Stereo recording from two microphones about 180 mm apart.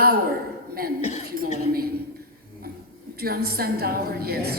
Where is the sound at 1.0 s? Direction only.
40° left (ahead or behind).